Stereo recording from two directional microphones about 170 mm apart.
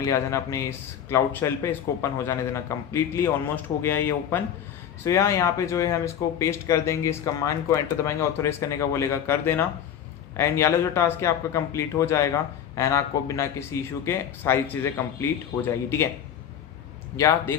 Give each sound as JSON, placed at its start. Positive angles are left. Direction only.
{"t": 0.0, "sound": "speech", "side_deg": 20}